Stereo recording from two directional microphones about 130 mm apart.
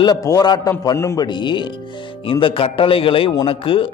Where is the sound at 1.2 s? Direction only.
35° left (ahead or behind).